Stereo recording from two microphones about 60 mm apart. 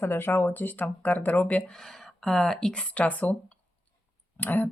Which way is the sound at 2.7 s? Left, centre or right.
Left.